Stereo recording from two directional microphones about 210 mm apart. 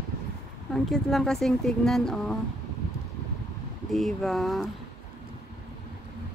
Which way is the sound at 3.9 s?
Centre (ahead or behind).